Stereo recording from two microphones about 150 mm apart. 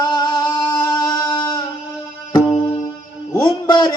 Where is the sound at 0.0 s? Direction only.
30° left (ahead or behind).